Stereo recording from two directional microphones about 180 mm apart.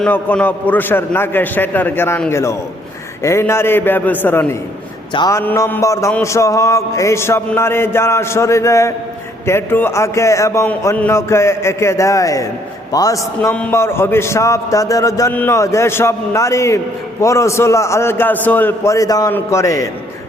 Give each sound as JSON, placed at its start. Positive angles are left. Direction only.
{"t": 0.0, "sound": "a man's voice", "side_deg": 5}